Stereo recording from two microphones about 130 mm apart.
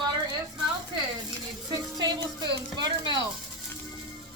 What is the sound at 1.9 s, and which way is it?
A woman's voice, 30° right (ahead or behind).